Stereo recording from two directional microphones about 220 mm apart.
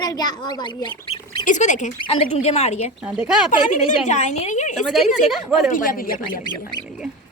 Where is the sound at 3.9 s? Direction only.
30° left (ahead or behind).